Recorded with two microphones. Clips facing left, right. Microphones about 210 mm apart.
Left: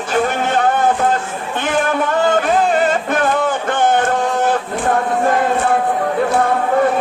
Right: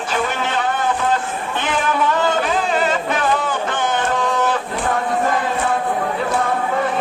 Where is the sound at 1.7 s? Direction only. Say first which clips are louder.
Left 2 dB; 50° left (ahead or behind).